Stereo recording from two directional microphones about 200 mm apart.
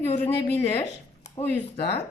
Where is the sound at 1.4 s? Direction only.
30° left (ahead or behind).